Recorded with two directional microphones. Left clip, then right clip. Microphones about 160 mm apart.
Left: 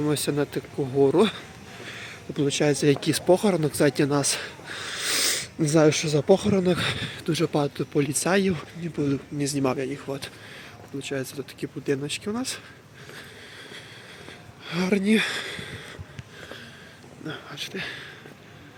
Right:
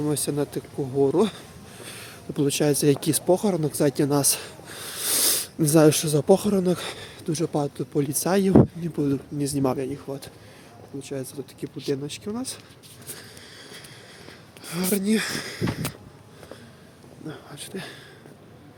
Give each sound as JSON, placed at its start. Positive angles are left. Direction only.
{"t": 0.0, "sound": "speech", "side_deg": -5}
{"t": 1.8, "sound": "speech", "side_deg": -30}
{"t": 3.2, "sound": "speech", "side_deg": -10}
{"t": 10.1, "sound": "speech", "side_deg": -5}
{"t": 14.6, "sound": "speech", "side_deg": 0}
{"t": 17.2, "sound": "speech", "side_deg": -10}
{"t": 17.6, "sound": "speech", "side_deg": -20}